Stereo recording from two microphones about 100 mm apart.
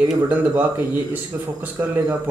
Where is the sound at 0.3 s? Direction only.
15° right (ahead or behind).